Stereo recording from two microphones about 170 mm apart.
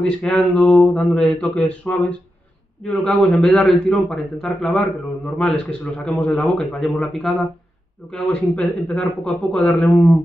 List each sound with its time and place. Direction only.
0.0 s a man's voice: 5° left (ahead or behind)